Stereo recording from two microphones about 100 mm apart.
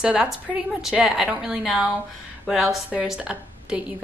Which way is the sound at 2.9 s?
10° right (ahead or behind).